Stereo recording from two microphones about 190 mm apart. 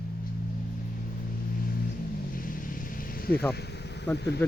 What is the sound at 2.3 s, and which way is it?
Vehicle, 45° left (ahead or behind).